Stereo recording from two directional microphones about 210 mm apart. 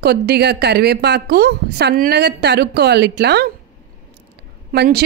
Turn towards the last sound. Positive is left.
turn(degrees=-50)  # may be behind; listen again after turning